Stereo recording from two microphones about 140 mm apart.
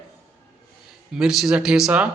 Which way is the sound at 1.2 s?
5° right (ahead or behind).